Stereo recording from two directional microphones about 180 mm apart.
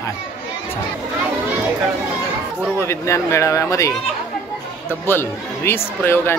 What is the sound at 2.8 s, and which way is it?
Speech, 15° left (ahead or behind).